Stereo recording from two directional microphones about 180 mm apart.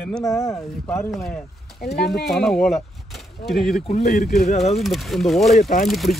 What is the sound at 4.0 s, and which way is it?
Speech, 60° left (ahead or behind).